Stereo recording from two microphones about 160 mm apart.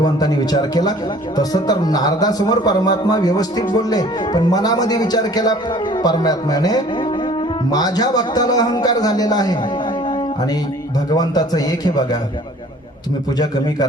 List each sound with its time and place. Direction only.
0.0 s speech: 25° left (ahead or behind)
11.2 s speech: 25° left (ahead or behind)